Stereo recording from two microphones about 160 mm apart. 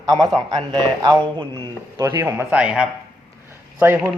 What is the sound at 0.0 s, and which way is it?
Speech, 25° right (ahead or behind).